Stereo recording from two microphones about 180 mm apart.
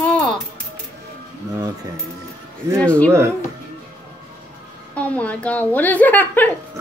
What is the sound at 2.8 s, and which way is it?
Speech, 5° left (ahead or behind).